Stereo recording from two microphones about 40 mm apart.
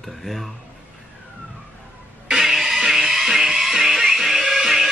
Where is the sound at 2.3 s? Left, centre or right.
Centre.